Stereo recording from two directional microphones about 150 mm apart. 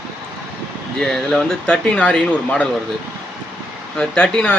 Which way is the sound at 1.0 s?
5° left (ahead or behind).